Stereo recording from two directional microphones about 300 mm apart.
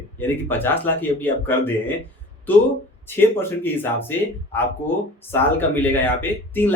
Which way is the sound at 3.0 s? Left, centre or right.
Centre.